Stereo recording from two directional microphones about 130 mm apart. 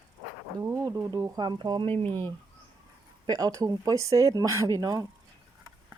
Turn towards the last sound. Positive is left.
turn(degrees=-30)  # may be behind; listen again after turning